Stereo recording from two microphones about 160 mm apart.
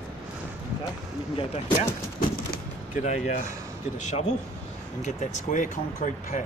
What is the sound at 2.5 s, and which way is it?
Door, 50° left (ahead or behind).